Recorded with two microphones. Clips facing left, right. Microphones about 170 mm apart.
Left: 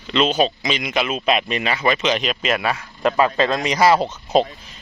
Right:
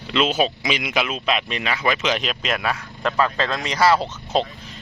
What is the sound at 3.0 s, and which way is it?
Speech, 15° left (ahead or behind).